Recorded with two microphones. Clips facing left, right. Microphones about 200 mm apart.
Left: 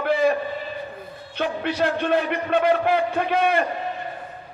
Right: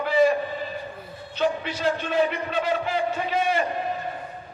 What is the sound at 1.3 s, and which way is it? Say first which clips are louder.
A man's voice: left 1 dB; 60° left (ahead or behind).